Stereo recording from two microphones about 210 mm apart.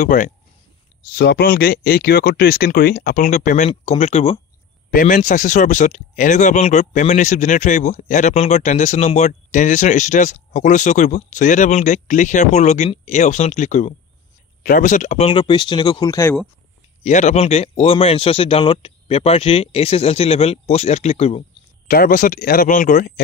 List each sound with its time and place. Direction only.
0.0 s speech: 40° left (ahead or behind)
1.1 s a man's voice: 50° left (ahead or behind); by 16.3 s 15° left (ahead or behind)
17.0 s a man's voice: 35° left (ahead or behind)
21.8 s speech: 45° left (ahead or behind)